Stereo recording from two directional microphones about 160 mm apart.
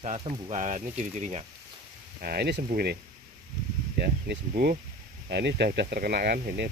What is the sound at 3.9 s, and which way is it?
Speech, 85° right.